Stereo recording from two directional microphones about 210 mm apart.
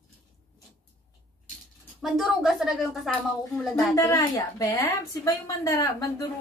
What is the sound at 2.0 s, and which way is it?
A woman's voice, centre (ahead or behind).